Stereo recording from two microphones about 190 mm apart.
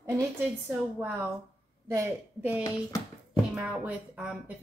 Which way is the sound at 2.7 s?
20° left (ahead or behind).